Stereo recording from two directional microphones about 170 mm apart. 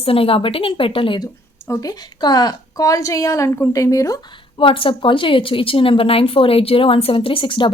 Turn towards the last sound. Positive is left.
turn(degrees=30)  # may be behind; listen again after turning